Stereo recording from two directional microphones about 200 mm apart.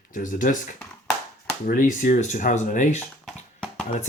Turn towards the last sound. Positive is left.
turn(degrees=0)  # may be behind; listen again after turning